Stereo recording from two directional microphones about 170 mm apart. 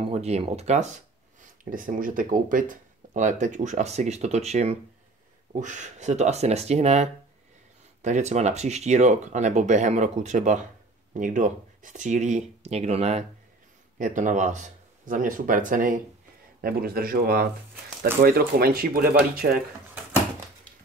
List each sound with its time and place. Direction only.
0.0 s speech: 40° right (ahead or behind)
1.6 s speech: 50° right (ahead or behind)
13.9 s speech: 50° right (ahead or behind)
16.6 s speech: 60° right (ahead or behind)